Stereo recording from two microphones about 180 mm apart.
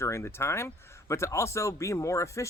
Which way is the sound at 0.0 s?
15° left (ahead or behind).